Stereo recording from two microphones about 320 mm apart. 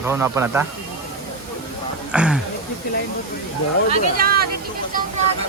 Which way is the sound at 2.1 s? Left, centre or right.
Centre.